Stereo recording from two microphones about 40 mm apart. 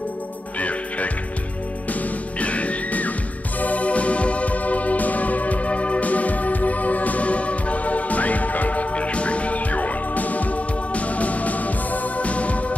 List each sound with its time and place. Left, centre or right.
0.6 s music: left